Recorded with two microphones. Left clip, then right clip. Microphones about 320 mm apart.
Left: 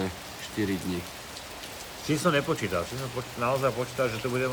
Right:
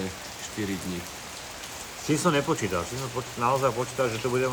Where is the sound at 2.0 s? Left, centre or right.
Centre.